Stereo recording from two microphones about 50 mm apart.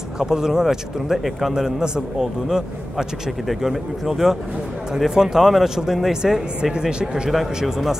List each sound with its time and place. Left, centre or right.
0.2 s a man's voice: centre
6.7 s a man's voice: centre
7.2 s speech: centre